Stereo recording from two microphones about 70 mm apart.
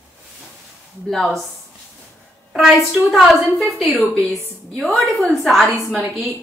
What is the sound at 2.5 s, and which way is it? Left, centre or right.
A woman's voice, centre.